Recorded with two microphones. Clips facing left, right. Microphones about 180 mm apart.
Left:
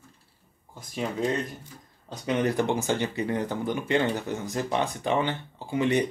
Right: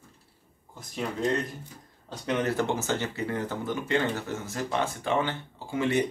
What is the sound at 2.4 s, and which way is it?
Speech, 15° left (ahead or behind).